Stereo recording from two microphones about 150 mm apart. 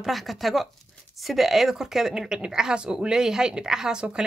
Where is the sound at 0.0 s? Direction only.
Centre (ahead or behind).